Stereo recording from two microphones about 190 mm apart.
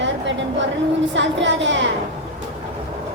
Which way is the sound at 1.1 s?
75° right (ahead or behind).